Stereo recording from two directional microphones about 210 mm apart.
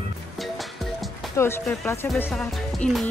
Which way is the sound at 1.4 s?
15° left (ahead or behind).